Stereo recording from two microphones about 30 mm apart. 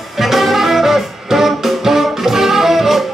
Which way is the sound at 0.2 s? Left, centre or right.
Centre.